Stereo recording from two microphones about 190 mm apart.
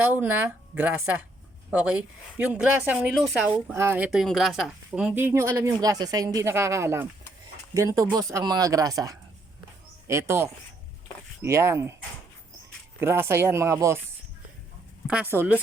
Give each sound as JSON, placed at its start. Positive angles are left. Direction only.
{"t": 0.0, "sound": "a woman's voice", "side_deg": -10}
{"t": 13.0, "sound": "a woman's voice", "side_deg": -10}
{"t": 15.0, "sound": "a woman's voice", "side_deg": -5}